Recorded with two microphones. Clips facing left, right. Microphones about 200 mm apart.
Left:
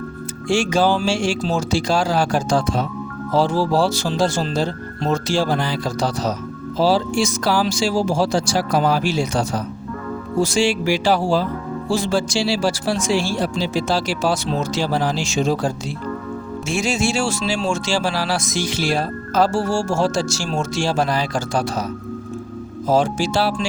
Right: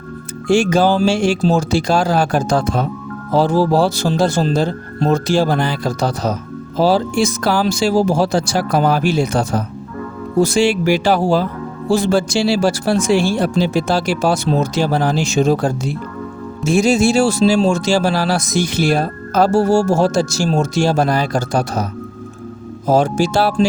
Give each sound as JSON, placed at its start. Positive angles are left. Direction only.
{"t": 0.4, "sound": "speech", "side_deg": -55}
{"t": 16.6, "sound": "speech", "side_deg": -40}
{"t": 22.9, "sound": "speech", "side_deg": -45}